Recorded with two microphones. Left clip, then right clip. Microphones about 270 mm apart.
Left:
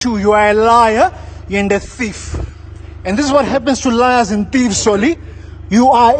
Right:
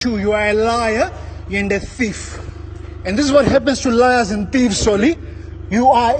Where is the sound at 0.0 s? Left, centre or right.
Centre.